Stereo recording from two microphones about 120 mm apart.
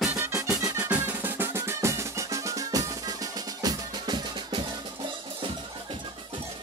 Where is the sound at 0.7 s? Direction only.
10° right (ahead or behind); by 5.9 s 45° right (ahead or behind).